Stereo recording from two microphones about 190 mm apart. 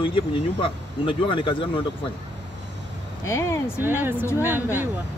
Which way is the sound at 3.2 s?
15° left (ahead or behind).